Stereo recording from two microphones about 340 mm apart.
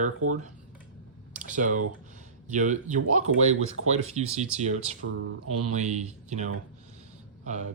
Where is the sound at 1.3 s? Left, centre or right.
Right.